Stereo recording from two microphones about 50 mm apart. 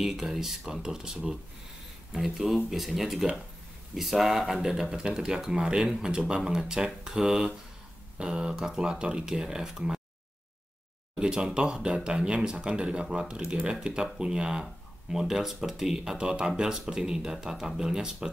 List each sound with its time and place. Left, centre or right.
0.0 s speech: centre
11.1 s speech: centre